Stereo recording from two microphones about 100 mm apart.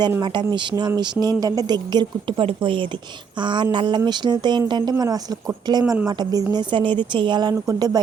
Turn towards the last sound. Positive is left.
turn(degrees=-40)  # may be behind; listen again after turning